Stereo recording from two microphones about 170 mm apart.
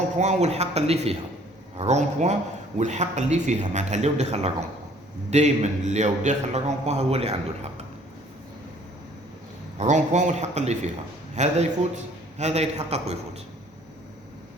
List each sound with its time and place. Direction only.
0.2 s a man's voice: 40° right (ahead or behind)
9.7 s a man's voice: 45° right (ahead or behind)